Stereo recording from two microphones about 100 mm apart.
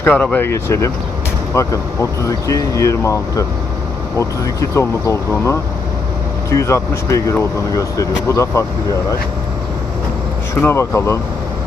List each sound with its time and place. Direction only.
0.0 s speech: 15° left (ahead or behind)
0.4 s speech: 30° left (ahead or behind)
10.5 s speech: 25° left (ahead or behind)